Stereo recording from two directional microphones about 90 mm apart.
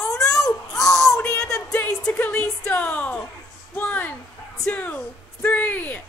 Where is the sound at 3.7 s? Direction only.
20° left (ahead or behind).